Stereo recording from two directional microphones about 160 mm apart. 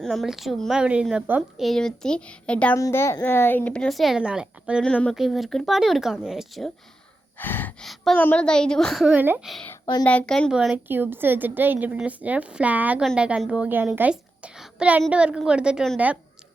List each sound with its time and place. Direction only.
0.0 s speech: centre (ahead or behind)
2.7 s speech: 15° left (ahead or behind); by 4.8 s 5° right (ahead or behind)
4.8 s speech: 5° left (ahead or behind)
7.3 s speech: 10° left (ahead or behind)
7.9 s speech: centre (ahead or behind)
9.1 s a woman's voice: 10° right (ahead or behind)
9.6 s a sound: 20° left (ahead or behind)
10.0 s a woman's voice: 5° left (ahead or behind)